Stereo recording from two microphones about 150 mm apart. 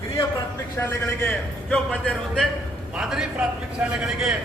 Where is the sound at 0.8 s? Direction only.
10° left (ahead or behind).